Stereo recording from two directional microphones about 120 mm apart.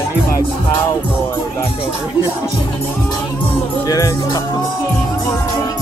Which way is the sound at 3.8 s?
30° left (ahead or behind).